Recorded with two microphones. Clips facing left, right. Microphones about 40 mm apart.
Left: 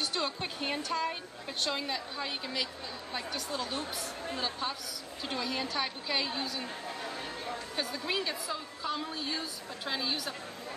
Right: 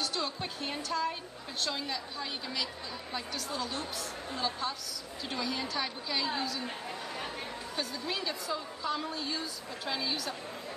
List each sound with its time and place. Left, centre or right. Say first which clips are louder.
0.0 s a woman's voice: left 1 dB; left
7.7 s a woman's voice: left 2 dB; centre